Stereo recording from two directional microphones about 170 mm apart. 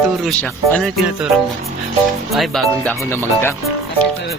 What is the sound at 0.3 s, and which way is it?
Speech, 5° left (ahead or behind).